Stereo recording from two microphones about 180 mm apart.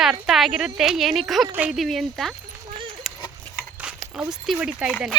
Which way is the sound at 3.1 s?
Centre (ahead or behind).